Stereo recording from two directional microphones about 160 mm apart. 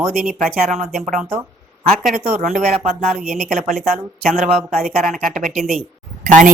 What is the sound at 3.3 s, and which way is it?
Speech, 5° right (ahead or behind).